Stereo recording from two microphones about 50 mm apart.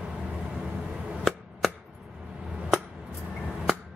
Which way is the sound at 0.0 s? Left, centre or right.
Centre.